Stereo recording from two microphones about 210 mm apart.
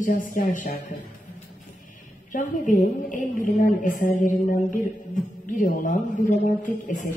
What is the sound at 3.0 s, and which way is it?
Speech, 40° left (ahead or behind).